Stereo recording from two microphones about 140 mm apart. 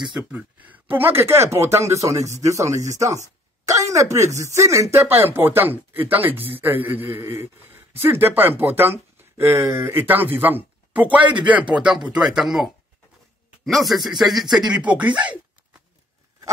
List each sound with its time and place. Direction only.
0.1 s speech: 10° right (ahead or behind)
11.2 s speech: 35° right (ahead or behind)
11.5 s speech: 5° right (ahead or behind)